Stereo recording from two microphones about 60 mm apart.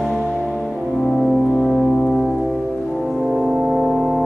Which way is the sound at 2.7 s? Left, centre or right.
Centre.